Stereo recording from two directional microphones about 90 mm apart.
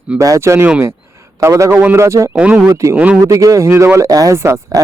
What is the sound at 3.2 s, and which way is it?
Speech, 35° right (ahead or behind).